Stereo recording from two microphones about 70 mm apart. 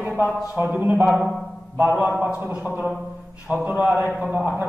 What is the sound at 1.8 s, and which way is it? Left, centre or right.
A man's voice, right.